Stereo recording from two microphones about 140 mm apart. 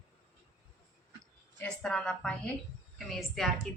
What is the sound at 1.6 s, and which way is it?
A woman's voice, 5° left (ahead or behind).